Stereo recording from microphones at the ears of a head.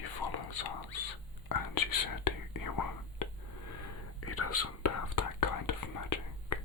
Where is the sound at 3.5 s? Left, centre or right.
Left.